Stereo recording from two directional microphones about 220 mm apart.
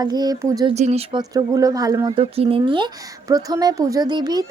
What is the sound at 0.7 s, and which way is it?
Speech, 30° right (ahead or behind).